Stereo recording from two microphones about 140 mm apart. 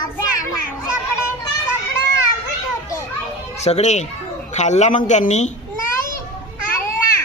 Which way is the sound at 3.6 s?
50° left (ahead or behind).